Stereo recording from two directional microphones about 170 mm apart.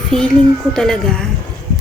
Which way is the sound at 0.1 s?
5° left (ahead or behind).